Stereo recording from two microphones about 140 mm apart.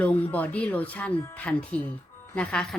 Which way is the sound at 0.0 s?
10° left (ahead or behind).